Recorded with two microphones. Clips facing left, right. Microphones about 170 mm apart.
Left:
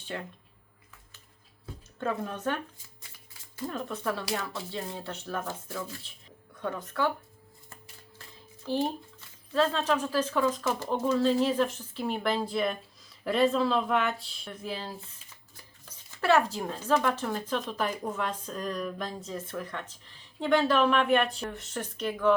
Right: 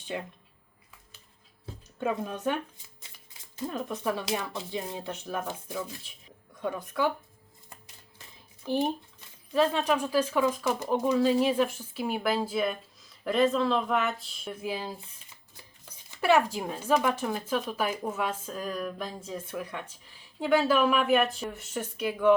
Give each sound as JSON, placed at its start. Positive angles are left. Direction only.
{"t": 0.1, "sound": "speech", "side_deg": -15}
{"t": 2.0, "sound": "speech", "side_deg": -15}
{"t": 8.6, "sound": "speech", "side_deg": -15}
{"t": 14.6, "sound": "speech", "side_deg": -15}
{"t": 16.2, "sound": "speech", "side_deg": -15}